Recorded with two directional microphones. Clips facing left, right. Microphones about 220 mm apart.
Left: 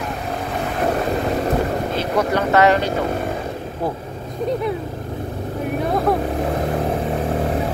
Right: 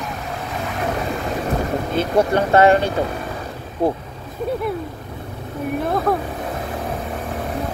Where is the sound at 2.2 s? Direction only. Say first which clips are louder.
Right 2 dB; 30° right (ahead or behind).